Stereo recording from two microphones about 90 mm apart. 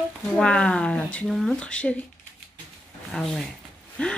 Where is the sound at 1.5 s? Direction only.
15° left (ahead or behind).